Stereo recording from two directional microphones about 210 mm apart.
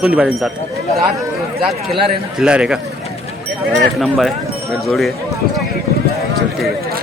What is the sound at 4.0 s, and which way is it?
Speech, centre (ahead or behind).